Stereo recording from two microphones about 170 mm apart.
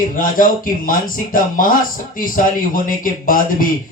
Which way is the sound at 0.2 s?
55° left (ahead or behind).